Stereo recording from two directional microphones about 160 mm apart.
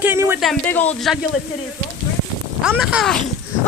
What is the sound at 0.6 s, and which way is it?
Speech, 10° left (ahead or behind).